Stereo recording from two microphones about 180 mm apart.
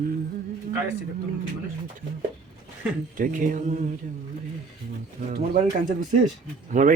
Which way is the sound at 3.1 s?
50° right (ahead or behind).